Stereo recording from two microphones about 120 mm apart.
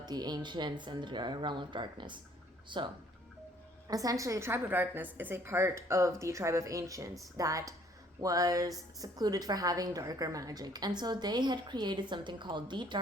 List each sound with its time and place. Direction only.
0.0 s a woman's voice: 35° right (ahead or behind)
3.8 s a woman's voice: 30° right (ahead or behind)